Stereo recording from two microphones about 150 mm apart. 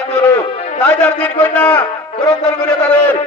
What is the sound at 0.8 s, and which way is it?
A man's voice, 10° left (ahead or behind).